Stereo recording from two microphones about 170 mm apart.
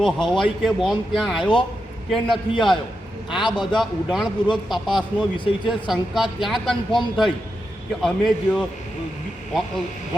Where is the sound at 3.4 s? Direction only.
25° left (ahead or behind).